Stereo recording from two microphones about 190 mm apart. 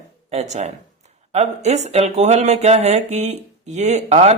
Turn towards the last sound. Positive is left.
turn(degrees=-35)  # may be behind; listen again after turning